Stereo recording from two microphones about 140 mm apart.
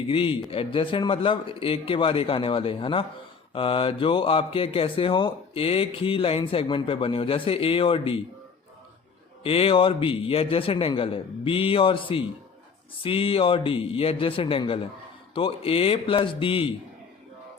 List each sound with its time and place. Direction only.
0.1 s speech: 40° left (ahead or behind)
9.4 s speech: 40° left (ahead or behind)